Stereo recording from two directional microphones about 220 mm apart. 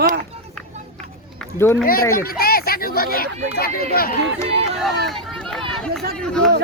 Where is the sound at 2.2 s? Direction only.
45° left (ahead or behind).